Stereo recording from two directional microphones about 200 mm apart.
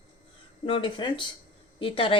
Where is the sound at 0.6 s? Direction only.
25° left (ahead or behind).